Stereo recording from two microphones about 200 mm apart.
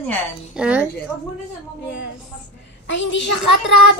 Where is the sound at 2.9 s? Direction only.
65° left (ahead or behind).